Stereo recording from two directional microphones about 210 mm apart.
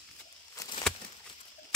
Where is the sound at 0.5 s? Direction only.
20° left (ahead or behind).